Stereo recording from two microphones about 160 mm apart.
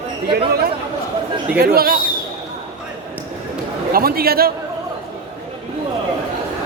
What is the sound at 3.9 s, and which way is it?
Speech, 70° right (ahead or behind).